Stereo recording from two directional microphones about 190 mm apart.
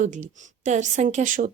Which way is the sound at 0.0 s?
40° right (ahead or behind).